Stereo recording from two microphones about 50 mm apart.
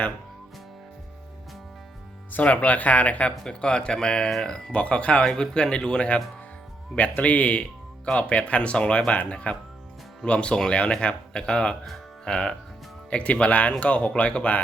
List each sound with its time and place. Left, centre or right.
2.3 s speech: left
7.2 s speech: left